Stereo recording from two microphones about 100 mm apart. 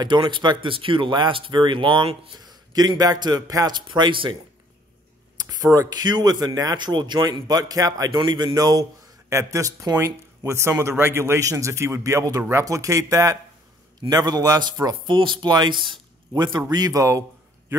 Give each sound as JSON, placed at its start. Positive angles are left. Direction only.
{"t": 0.0, "sound": "a man's voice", "side_deg": -45}
{"t": 2.3, "sound": "a man's voice", "side_deg": -40}
{"t": 5.6, "sound": "speech", "side_deg": -25}
{"t": 5.9, "sound": "a man's voice", "side_deg": -40}
{"t": 9.3, "sound": "a man's voice", "side_deg": -30}